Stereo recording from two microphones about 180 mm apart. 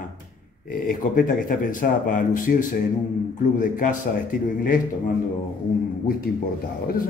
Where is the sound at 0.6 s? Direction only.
50° left (ahead or behind).